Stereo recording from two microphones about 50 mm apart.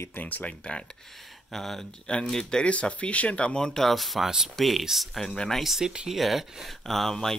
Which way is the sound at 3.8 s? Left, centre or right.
Centre.